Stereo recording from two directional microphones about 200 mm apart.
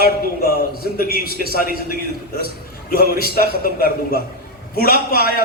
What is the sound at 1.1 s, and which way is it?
A man's voice, 50° right (ahead or behind).